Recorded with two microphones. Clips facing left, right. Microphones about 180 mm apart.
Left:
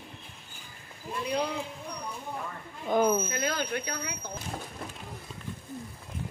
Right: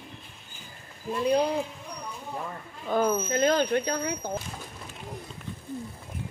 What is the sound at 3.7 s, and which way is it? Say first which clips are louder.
Speech: right 8 dB; 40° right (ahead or behind).